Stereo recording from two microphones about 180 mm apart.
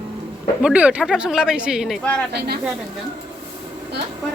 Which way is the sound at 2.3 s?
65° right (ahead or behind).